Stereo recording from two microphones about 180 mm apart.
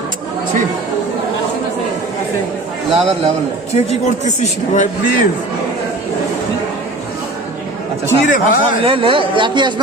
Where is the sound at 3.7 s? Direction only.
40° left (ahead or behind).